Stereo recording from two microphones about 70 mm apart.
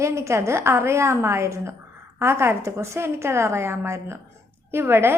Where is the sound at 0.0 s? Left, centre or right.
Right.